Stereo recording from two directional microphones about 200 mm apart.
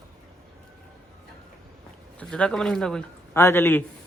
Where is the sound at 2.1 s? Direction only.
5° left (ahead or behind).